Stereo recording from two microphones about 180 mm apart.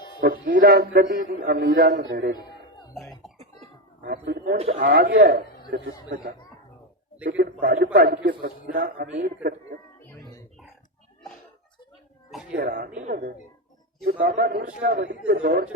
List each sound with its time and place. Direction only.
0.2 s a man's voice: 55° right (ahead or behind)
2.9 s cough: centre (ahead or behind)
4.0 s a man's voice: 60° right (ahead or behind)
7.6 s a man's voice: 60° right (ahead or behind)
12.3 s a sound: 5° right (ahead or behind)
12.5 s a man's voice: 60° right (ahead or behind)
15.4 s speech: 45° right (ahead or behind)